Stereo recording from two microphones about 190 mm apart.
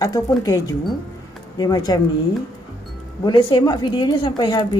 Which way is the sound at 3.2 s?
25° left (ahead or behind).